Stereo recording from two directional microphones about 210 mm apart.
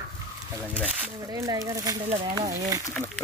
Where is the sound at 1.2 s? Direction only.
20° right (ahead or behind).